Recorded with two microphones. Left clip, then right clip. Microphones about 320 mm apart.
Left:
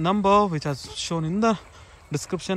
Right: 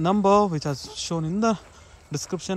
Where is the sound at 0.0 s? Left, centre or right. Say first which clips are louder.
Even; centre.